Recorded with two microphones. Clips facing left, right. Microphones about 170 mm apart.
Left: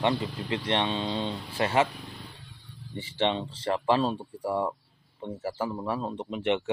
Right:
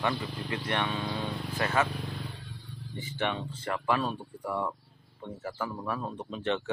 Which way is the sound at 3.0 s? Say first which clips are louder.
Left 5 dB; 25° left (ahead or behind).